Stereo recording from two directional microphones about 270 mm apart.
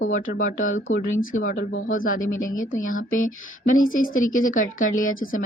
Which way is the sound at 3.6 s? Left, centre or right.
Left.